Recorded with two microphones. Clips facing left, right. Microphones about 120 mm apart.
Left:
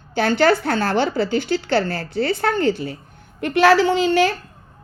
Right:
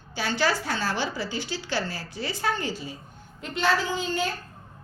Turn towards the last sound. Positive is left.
turn(degrees=85)